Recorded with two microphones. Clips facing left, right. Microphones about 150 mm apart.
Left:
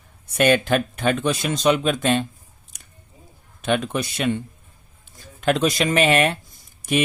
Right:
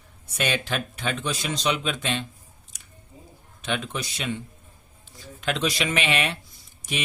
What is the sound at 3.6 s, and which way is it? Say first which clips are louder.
Speech: left 7 dB; 55° left (ahead or behind).